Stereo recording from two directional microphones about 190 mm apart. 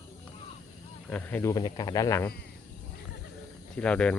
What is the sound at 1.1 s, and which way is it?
Speech, 10° left (ahead or behind).